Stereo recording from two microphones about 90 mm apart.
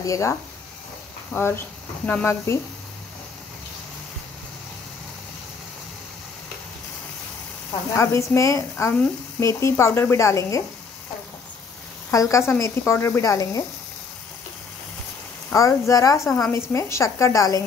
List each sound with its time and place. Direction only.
0.0 s speech: 35° left (ahead or behind)
7.9 s speech: 30° left (ahead or behind)
12.1 s speech: 35° left (ahead or behind)
15.5 s speech: 40° left (ahead or behind)